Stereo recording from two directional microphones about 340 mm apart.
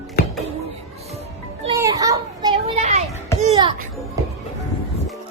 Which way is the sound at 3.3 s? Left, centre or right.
Centre.